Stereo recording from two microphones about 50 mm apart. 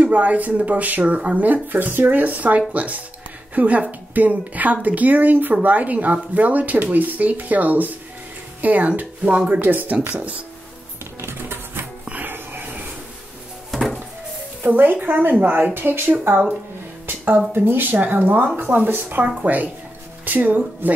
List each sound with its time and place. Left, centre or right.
0.0 s speech: right
1.0 s speech: right
1.4 s speech: right
9.6 s speech: right
9.9 s speech: right
11.1 s music: right
12.3 s a sound: right
13.7 s a sound: centre
14.6 s speech: right
17.0 s a sound: right
17.5 s speech: right
19.2 s speech: right